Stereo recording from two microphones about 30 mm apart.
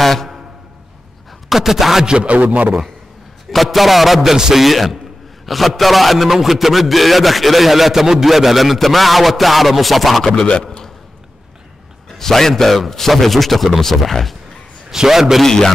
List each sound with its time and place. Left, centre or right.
0.0 s a sound: centre
1.5 s a man's voice: centre
3.5 s a man's voice: centre
10.3 s a man's voice: left
12.2 s a man's voice: centre
15.0 s a man's voice: centre
15.4 s a man's voice: centre